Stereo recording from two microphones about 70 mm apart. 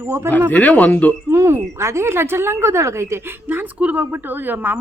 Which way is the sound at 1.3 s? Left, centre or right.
Right.